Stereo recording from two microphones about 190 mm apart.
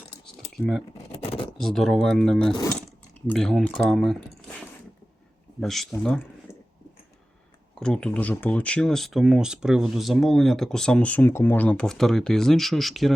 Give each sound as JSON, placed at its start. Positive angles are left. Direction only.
{"t": 0.5, "sound": "speech", "side_deg": 0}
{"t": 1.1, "sound": "a sound", "side_deg": 30}
{"t": 1.5, "sound": "speech", "side_deg": 0}
{"t": 5.5, "sound": "speech", "side_deg": 0}
{"t": 7.8, "sound": "speech", "side_deg": 5}